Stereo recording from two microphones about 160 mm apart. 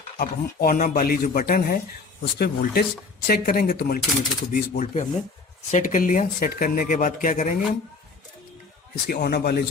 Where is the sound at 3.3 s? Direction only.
65° left (ahead or behind).